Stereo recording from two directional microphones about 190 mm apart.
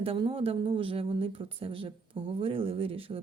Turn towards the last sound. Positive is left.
turn(degrees=-30)  # may be behind; listen again after turning